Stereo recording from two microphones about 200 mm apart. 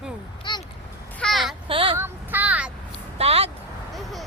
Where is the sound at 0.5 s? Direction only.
20° left (ahead or behind).